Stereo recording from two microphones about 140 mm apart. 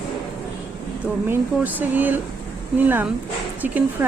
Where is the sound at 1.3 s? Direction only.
10° right (ahead or behind).